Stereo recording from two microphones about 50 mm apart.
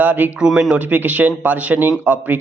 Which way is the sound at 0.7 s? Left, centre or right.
Right.